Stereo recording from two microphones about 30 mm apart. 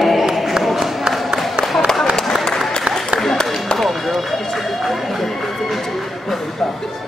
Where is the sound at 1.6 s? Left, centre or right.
Centre.